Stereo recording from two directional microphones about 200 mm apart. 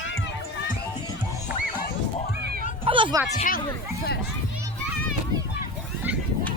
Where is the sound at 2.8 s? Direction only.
25° right (ahead or behind).